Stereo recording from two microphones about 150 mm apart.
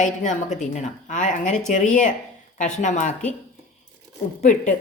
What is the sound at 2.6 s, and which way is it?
Speech, 55° left (ahead or behind).